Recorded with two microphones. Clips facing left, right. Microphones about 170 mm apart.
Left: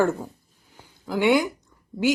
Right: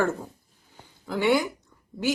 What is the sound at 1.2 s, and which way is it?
Speech, 15° left (ahead or behind).